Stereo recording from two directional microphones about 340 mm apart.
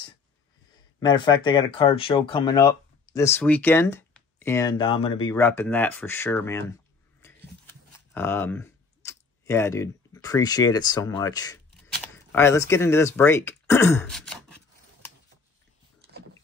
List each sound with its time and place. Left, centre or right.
0.9 s speech: centre
8.1 s speech: centre
16.0 s rowboat: right